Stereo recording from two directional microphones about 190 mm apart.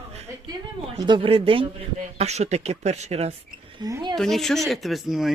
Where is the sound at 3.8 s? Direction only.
20° right (ahead or behind).